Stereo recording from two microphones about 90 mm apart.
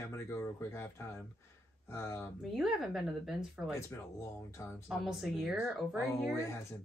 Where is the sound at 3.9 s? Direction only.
35° left (ahead or behind).